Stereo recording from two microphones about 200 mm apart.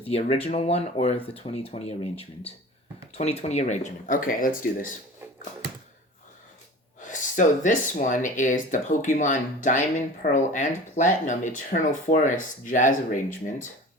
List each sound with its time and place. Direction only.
0.0 s speech: 30° left (ahead or behind)
7.0 s speech: 40° left (ahead or behind)